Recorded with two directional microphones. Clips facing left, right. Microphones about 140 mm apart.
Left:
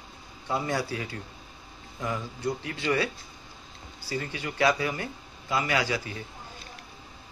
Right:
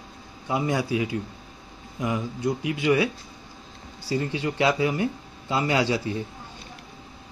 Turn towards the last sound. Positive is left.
turn(degrees=-25)  # may be behind; listen again after turning